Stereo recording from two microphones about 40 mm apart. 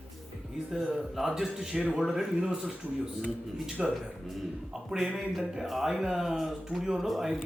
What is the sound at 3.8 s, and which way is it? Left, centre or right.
A man's voice, centre.